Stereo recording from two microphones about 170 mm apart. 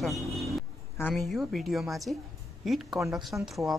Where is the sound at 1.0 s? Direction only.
5° left (ahead or behind).